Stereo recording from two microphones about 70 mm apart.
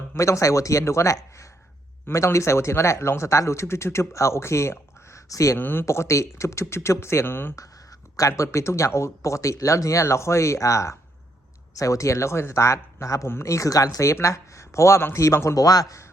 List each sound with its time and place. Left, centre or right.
0.2 s speech: left
5.5 s speech: left
5.8 s speech: left
7.5 s a sound: left
8.3 s speech: left
14.0 s speech: left